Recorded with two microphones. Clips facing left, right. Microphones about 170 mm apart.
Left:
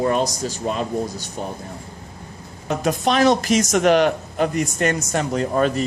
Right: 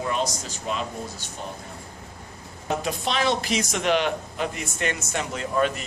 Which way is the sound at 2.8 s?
45° left (ahead or behind).